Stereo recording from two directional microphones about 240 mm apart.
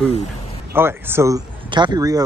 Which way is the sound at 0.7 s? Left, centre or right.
Centre.